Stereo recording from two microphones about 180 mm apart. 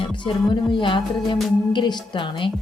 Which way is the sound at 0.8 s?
25° left (ahead or behind).